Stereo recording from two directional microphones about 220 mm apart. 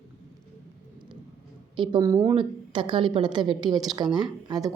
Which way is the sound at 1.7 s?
20° right (ahead or behind).